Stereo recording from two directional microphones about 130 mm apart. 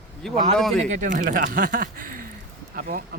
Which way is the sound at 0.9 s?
80° right.